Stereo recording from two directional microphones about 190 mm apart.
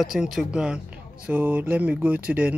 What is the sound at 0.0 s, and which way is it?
Speech, centre (ahead or behind).